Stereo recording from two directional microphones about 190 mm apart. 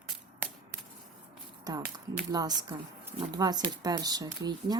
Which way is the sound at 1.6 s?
20° right (ahead or behind).